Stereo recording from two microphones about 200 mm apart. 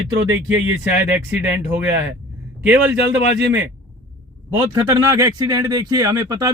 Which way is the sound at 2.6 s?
10° right (ahead or behind).